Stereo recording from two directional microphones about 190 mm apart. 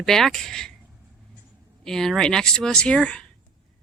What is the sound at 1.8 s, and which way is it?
Speech, centre (ahead or behind).